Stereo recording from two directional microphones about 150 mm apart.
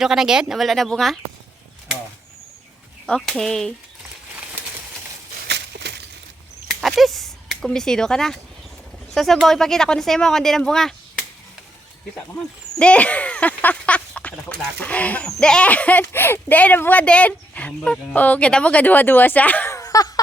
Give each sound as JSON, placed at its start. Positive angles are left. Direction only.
{"t": 0.0, "sound": "speech", "side_deg": -5}
{"t": 3.1, "sound": "speech", "side_deg": 0}
{"t": 5.7, "sound": "a sound", "side_deg": -90}
{"t": 6.8, "sound": "speech", "side_deg": 0}